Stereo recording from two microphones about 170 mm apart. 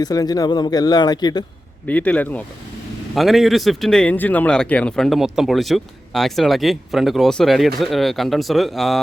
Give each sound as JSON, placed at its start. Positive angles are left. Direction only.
{"t": 0.0, "sound": "a man's voice", "side_deg": 20}
{"t": 1.9, "sound": "speech", "side_deg": 10}